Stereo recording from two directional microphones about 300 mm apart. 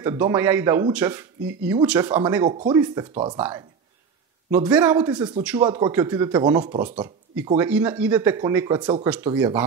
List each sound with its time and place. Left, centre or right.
0.0 s speech: centre
4.6 s speech: centre
7.4 s speech: centre